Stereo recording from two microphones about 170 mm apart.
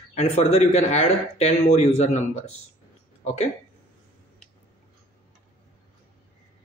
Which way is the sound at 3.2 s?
40° left (ahead or behind).